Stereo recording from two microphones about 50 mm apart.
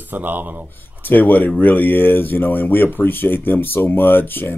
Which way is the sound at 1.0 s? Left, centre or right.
Left.